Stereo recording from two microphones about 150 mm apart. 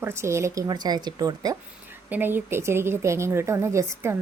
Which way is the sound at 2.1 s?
15° right (ahead or behind).